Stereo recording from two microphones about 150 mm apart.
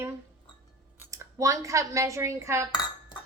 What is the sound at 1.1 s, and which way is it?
Speech, 20° right (ahead or behind).